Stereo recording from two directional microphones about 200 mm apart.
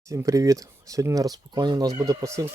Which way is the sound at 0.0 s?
15° right (ahead or behind).